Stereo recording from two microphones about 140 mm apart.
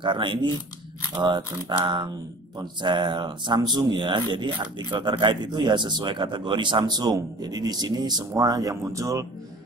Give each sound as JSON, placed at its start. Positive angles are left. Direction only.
{"t": 0.0, "sound": "speech", "side_deg": -35}